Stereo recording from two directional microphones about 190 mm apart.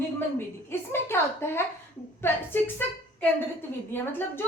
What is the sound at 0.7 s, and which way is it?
A woman's voice, 10° left (ahead or behind).